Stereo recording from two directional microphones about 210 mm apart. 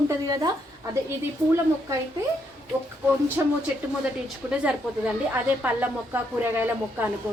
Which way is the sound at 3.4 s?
15° right (ahead or behind).